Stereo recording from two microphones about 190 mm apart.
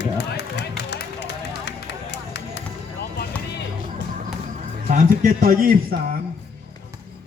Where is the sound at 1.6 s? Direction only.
65° left (ahead or behind).